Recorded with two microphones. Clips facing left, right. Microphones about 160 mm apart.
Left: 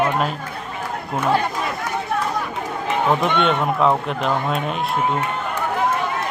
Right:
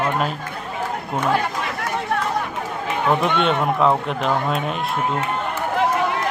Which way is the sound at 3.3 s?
Centre (ahead or behind).